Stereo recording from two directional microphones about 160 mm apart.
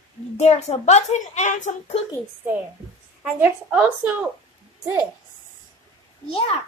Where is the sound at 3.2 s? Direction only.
10° right (ahead or behind).